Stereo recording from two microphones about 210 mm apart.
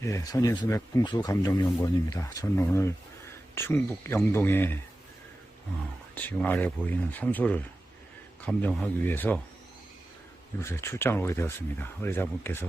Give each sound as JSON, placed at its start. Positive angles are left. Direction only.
{"t": 0.0, "sound": "speech", "side_deg": 15}
{"t": 6.1, "sound": "speech", "side_deg": 10}
{"t": 10.6, "sound": "speech", "side_deg": 10}